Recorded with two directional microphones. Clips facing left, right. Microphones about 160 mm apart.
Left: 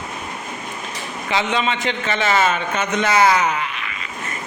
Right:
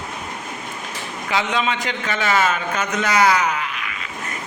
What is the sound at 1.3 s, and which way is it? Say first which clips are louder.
A man's voice: left 1 dB; 5° right (ahead or behind).